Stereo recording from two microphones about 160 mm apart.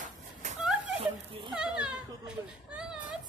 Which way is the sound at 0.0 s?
50° right (ahead or behind).